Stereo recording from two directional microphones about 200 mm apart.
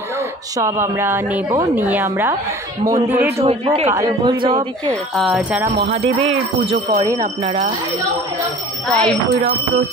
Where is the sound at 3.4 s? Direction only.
30° right (ahead or behind).